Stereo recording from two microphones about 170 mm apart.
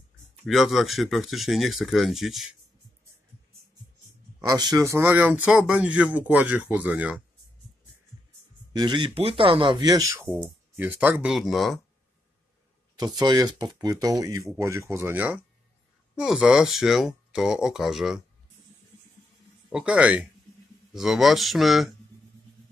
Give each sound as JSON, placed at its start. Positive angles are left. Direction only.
{"t": 0.5, "sound": "speech", "side_deg": 0}
{"t": 4.5, "sound": "speech", "side_deg": -20}
{"t": 8.7, "sound": "speech", "side_deg": -25}
{"t": 13.2, "sound": "speech", "side_deg": -25}
{"t": 19.7, "sound": "speech", "side_deg": -5}